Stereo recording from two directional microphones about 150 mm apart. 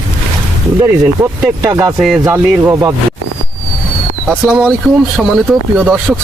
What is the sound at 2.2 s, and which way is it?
Speech, 20° right (ahead or behind).